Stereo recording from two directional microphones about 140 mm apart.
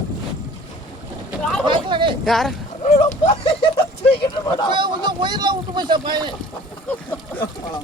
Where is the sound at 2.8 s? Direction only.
45° left (ahead or behind).